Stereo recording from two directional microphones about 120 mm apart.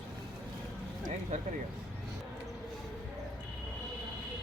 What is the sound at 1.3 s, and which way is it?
Speech, 90° right.